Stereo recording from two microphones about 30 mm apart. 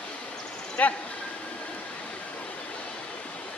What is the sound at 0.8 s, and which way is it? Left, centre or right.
Speech, left.